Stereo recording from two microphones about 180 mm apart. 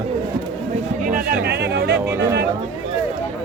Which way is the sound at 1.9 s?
10° right (ahead or behind).